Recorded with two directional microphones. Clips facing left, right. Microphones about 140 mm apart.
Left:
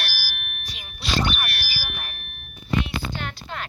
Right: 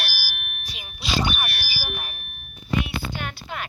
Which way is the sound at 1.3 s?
20° right (ahead or behind).